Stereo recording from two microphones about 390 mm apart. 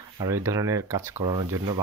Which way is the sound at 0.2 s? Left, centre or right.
Centre.